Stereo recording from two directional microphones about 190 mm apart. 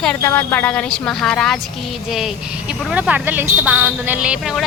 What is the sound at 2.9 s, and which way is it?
A woman's voice, 5° right (ahead or behind).